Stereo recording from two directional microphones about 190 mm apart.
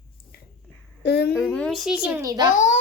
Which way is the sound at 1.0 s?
60° left (ahead or behind).